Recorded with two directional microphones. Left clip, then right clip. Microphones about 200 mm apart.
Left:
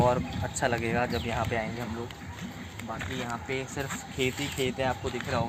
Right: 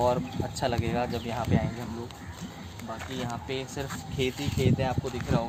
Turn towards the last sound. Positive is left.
turn(degrees=0)  # may be behind; listen again after turning